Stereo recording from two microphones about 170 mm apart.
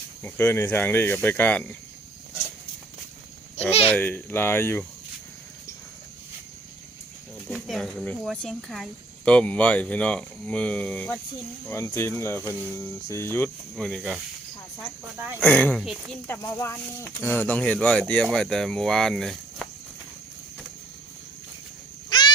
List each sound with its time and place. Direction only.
0.2 s speech: 15° left (ahead or behind)
3.7 s a child's voice: 35° left (ahead or behind)
3.9 s speech: 10° left (ahead or behind)
7.4 s speech: centre (ahead or behind)
13.7 s speech: centre (ahead or behind)
15.4 s speech: 10° left (ahead or behind)
16.2 s speech: 15° left (ahead or behind)